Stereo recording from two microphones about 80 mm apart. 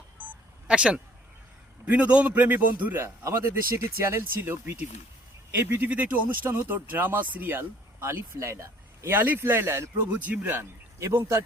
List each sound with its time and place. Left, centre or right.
0.7 s a man's voice: centre; by 4.8 s right
5.8 s speech: centre; by 9.0 s right
9.0 s a man's voice: right
10.1 s a man's voice: centre